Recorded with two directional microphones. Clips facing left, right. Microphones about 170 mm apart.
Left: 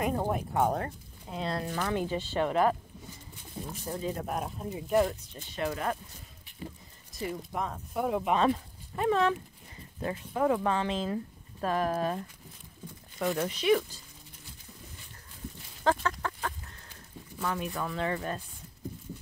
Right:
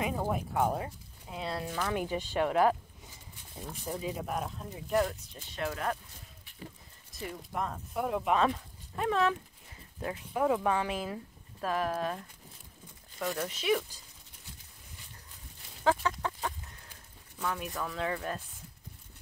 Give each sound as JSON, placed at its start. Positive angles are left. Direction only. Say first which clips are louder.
{"t": 0.3, "sound": "speech", "louder": "left 2 dB", "side_deg": 0}
{"t": 2.0, "sound": "speech", "louder": "even", "side_deg": -15}
{"t": 3.8, "sound": "speech", "louder": "left 1 dB", "side_deg": -5}
{"t": 7.2, "sound": "speech", "louder": "left 3 dB", "side_deg": 0}
{"t": 13.4, "sound": "speech", "louder": "left 4 dB", "side_deg": -5}
{"t": 15.8, "sound": "chicken", "louder": "even", "side_deg": -10}
{"t": 17.4, "sound": "speech", "louder": "left 2 dB", "side_deg": 0}